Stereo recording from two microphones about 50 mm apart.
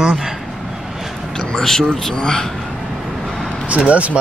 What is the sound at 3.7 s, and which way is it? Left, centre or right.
Speech, right.